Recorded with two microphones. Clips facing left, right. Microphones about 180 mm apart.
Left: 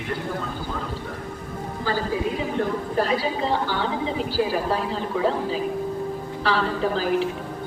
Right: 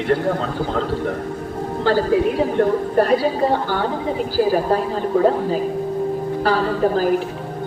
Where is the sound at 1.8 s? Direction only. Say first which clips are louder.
Right 8 dB; 65° right (ahead or behind).